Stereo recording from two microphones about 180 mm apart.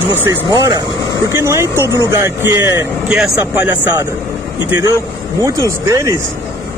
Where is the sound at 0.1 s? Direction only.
15° right (ahead or behind).